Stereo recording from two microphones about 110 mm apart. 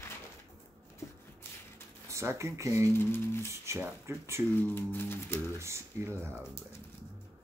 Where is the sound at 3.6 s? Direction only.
25° right (ahead or behind).